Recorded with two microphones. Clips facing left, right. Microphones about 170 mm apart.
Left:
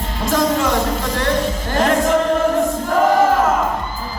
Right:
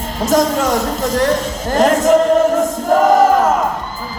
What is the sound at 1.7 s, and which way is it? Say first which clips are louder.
Music: right 5 dB; 40° right (ahead or behind).